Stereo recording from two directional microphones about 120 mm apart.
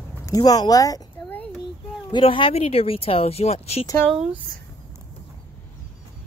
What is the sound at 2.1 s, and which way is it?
Speech, 45° left (ahead or behind).